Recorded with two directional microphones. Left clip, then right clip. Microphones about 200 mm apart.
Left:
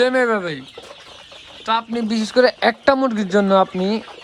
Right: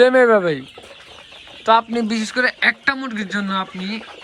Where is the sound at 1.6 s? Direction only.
5° left (ahead or behind).